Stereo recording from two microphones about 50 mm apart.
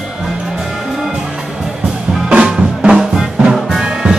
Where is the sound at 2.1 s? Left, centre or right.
Centre.